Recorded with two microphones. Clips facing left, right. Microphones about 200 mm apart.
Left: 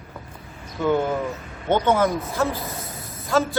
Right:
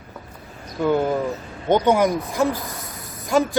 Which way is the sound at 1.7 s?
15° right (ahead or behind).